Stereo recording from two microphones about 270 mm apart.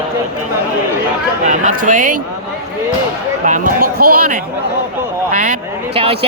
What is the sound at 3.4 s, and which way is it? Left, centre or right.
Speech, right.